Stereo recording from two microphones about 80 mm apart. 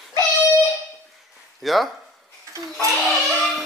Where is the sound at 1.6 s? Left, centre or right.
Centre.